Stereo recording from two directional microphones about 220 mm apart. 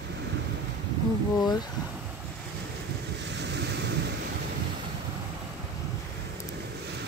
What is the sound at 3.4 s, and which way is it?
Ocean, 50° right (ahead or behind).